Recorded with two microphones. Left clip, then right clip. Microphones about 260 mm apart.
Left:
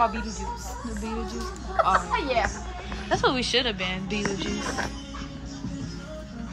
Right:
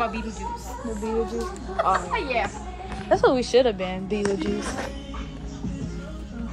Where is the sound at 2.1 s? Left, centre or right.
Left.